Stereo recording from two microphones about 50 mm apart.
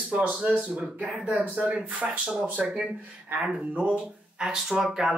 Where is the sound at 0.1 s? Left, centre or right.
Right.